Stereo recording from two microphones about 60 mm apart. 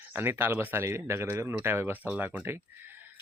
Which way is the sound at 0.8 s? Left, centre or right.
Right.